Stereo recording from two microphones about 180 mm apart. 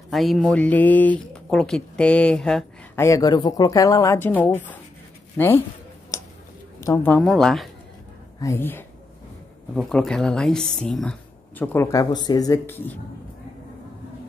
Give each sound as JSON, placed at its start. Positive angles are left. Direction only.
{"t": 0.1, "sound": "speech", "side_deg": 0}
{"t": 3.0, "sound": "a woman's voice", "side_deg": 20}
{"t": 6.1, "sound": "a sound", "side_deg": 15}
{"t": 6.8, "sound": "speech", "side_deg": 15}
{"t": 8.4, "sound": "a woman's voice", "side_deg": 15}